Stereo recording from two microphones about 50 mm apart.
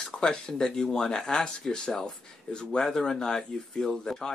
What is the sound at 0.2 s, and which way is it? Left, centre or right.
Speech, centre.